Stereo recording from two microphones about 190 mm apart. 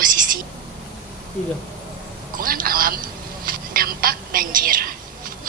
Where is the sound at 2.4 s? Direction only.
50° right (ahead or behind).